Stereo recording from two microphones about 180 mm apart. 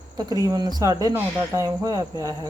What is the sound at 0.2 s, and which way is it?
Speech, 20° right (ahead or behind).